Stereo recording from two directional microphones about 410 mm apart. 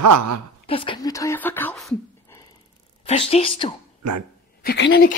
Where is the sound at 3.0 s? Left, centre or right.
Centre.